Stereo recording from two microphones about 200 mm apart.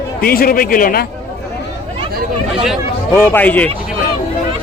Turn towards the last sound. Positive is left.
turn(degrees=10)  # may be behind; listen again after turning